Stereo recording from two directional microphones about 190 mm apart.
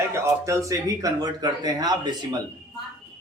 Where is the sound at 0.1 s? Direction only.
15° right (ahead or behind).